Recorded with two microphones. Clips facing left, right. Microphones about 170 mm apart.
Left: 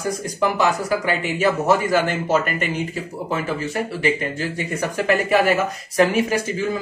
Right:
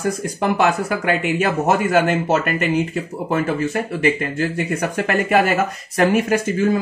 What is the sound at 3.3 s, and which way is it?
Speech, 50° right (ahead or behind).